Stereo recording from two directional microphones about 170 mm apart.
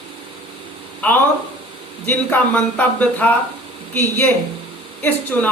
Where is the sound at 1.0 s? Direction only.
10° left (ahead or behind).